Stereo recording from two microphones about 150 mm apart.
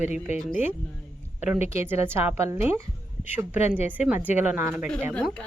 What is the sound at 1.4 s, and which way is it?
A woman's voice, 10° right (ahead or behind).